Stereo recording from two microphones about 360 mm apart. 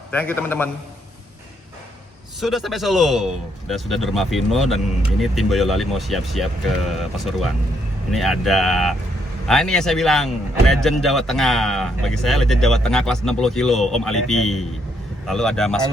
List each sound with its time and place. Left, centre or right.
0.1 s a man's voice: centre
2.4 s a man's voice: centre
8.1 s a man's voice: centre